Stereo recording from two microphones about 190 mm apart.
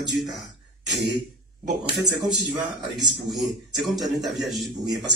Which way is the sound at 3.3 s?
Centre (ahead or behind).